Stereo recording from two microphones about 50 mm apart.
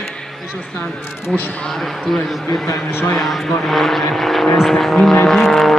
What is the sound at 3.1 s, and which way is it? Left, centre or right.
Speech, centre.